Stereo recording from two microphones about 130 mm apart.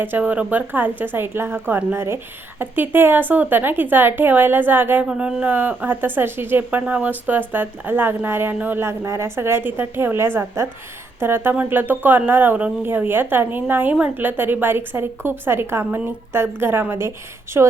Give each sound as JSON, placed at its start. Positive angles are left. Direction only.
{"t": 0.0, "sound": "a woman's voice", "side_deg": -15}